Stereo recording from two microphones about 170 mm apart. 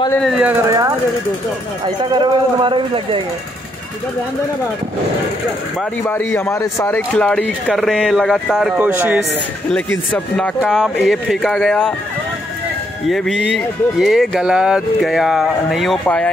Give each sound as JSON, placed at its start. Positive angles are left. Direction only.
{"t": 0.2, "sound": "speech", "side_deg": -5}
{"t": 0.7, "sound": "a man's voice", "side_deg": -20}
{"t": 2.0, "sound": "a man's voice", "side_deg": -30}
{"t": 6.0, "sound": "a man's voice", "side_deg": 10}
{"t": 7.2, "sound": "speech", "side_deg": 5}
{"t": 8.7, "sound": "speech", "side_deg": -10}
{"t": 10.1, "sound": "speech", "side_deg": 5}
{"t": 13.0, "sound": "speech", "side_deg": 0}